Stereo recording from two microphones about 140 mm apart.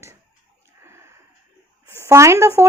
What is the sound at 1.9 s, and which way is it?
Speech, 20° right (ahead or behind).